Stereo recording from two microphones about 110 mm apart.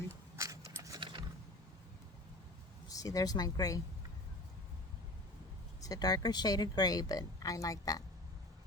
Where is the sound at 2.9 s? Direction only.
35° left (ahead or behind).